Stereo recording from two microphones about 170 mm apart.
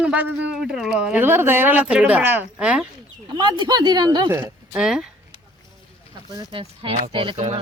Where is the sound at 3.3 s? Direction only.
25° right (ahead or behind); by 5.0 s 5° right (ahead or behind).